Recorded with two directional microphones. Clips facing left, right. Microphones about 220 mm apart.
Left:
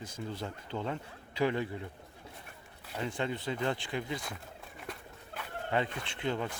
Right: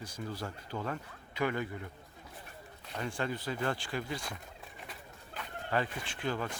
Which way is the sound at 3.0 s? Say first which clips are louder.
Left 1 dB; 20° left (ahead or behind).